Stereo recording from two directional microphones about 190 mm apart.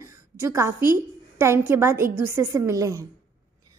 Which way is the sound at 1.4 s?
15° right (ahead or behind).